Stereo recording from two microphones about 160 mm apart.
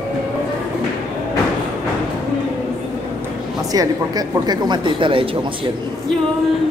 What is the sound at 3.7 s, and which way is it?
A woman's voice, 25° right (ahead or behind).